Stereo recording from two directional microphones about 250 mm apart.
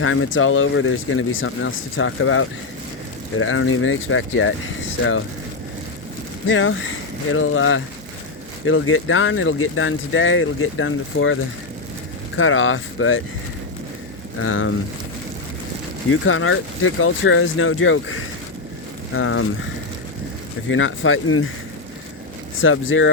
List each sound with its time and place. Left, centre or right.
0.0 s speech: left
6.5 s speech: left
12.4 s speech: left
14.3 s speech: left
16.0 s speech: left
20.7 s speech: left
22.6 s speech: left